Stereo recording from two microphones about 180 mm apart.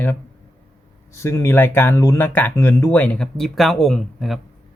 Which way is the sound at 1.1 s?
15° left (ahead or behind).